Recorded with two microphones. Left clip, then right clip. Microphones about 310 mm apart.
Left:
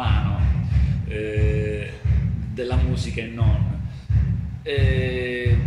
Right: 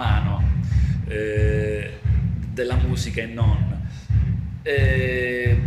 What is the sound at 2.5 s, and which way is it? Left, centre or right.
Speech, right.